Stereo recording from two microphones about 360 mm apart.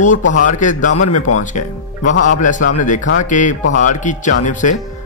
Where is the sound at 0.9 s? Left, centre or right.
Left.